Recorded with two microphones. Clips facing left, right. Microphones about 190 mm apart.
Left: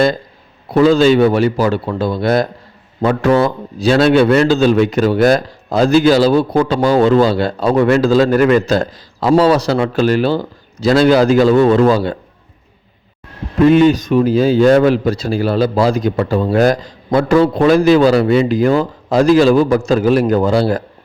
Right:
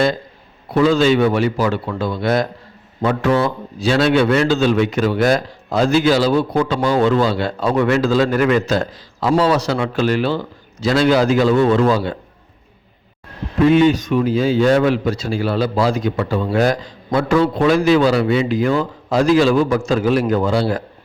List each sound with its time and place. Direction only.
0.7 s a man's voice: 35° left (ahead or behind)
13.6 s a man's voice: 45° left (ahead or behind)